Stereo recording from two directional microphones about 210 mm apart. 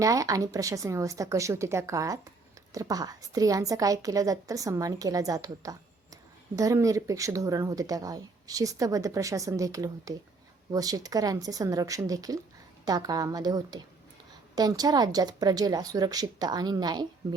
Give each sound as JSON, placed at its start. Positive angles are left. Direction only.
{"t": 0.0, "sound": "speech", "side_deg": -15}